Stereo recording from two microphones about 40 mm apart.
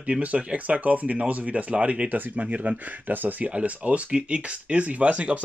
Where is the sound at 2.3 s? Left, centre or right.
Right.